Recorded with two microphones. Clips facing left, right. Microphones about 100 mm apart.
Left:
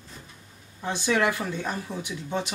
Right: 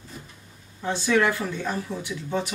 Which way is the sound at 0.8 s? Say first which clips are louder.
Right 2 dB; 15° left (ahead or behind).